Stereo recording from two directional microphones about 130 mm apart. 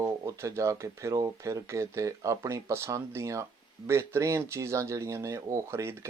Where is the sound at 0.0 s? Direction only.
25° right (ahead or behind).